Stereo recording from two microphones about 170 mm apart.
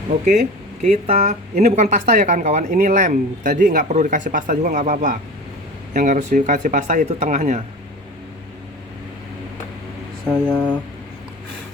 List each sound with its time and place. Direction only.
0.8 s speech: 40° right (ahead or behind)
2.0 s a man's voice: 55° right (ahead or behind)
10.2 s speech: 5° left (ahead or behind)